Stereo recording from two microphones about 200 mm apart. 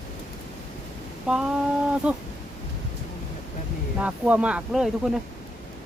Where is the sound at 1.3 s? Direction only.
5° right (ahead or behind).